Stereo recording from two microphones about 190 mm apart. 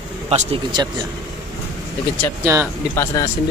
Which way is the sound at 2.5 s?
15° right (ahead or behind).